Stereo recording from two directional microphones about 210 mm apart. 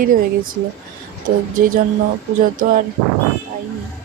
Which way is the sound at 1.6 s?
40° right (ahead or behind).